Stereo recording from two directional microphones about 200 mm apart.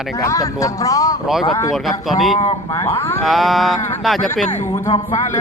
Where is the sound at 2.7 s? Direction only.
15° left (ahead or behind).